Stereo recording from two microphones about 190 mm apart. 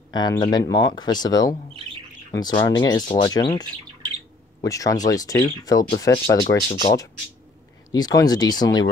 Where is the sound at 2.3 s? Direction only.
20° left (ahead or behind).